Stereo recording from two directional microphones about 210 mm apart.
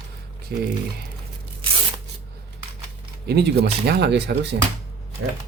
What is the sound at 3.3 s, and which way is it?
Speech, 50° right (ahead or behind).